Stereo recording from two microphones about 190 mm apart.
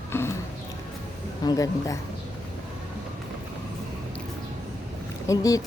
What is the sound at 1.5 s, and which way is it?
Speech, 20° left (ahead or behind).